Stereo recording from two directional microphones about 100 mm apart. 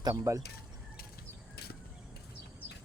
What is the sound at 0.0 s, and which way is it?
Speech, 35° right (ahead or behind).